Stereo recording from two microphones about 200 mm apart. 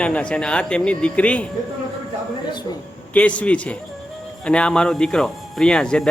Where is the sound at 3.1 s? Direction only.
5° left (ahead or behind).